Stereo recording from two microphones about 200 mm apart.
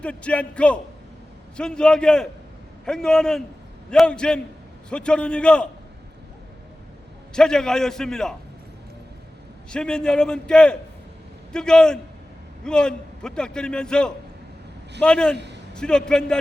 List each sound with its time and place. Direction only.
0.0 s a man's voice: 5° left (ahead or behind)
7.3 s a man's voice: 5° left (ahead or behind)
9.6 s a man's voice: 5° left (ahead or behind)
15.4 s a sound: 60° right (ahead or behind)
15.8 s a man's voice: 5° left (ahead or behind)